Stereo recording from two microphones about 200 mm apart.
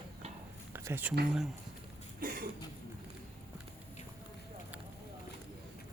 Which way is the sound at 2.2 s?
45° right (ahead or behind).